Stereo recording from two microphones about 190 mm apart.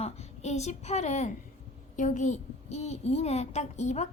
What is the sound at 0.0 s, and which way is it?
A woman's voice, 35° left (ahead or behind).